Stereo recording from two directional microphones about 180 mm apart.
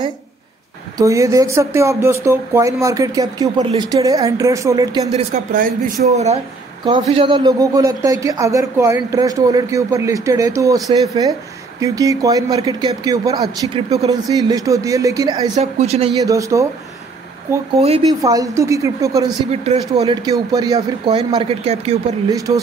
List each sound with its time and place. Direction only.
0.9 s speech: 15° right (ahead or behind)
5.1 s speech: 45° right (ahead or behind)
6.8 s a man's voice: 30° right (ahead or behind)
15.5 s speech: 35° right (ahead or behind)
16.2 s speech: 20° right (ahead or behind)
17.7 s speech: 35° right (ahead or behind)
18.2 s speech: 20° right (ahead or behind)
19.5 s speech: 35° right (ahead or behind)
20.2 s a man's voice: 20° right (ahead or behind)
21.4 s a man's voice: 35° right (ahead or behind)